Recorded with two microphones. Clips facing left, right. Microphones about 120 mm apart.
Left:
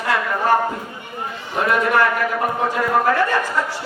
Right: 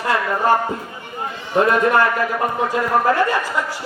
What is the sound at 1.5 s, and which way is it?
A man's voice, 25° right (ahead or behind).